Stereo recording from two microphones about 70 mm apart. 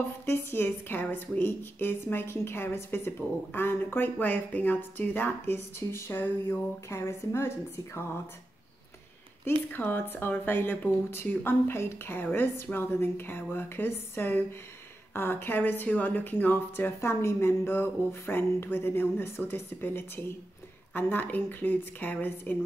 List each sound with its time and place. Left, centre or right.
0.2 s a woman's voice: left
5.8 s a woman's voice: left
6.9 s a woman's voice: left
9.4 s a woman's voice: left